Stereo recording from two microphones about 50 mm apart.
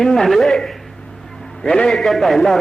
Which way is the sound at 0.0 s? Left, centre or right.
Centre.